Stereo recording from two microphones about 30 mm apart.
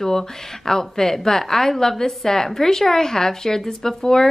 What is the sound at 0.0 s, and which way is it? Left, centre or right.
A woman's voice, centre.